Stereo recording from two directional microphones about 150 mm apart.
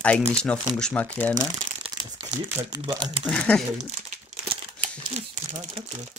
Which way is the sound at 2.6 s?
30° right (ahead or behind).